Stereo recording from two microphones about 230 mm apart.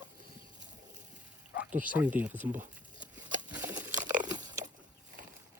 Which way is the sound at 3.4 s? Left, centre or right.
Centre.